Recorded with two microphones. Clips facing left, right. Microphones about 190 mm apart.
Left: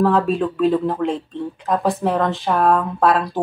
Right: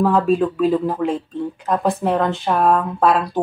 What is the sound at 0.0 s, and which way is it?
Speech, centre (ahead or behind).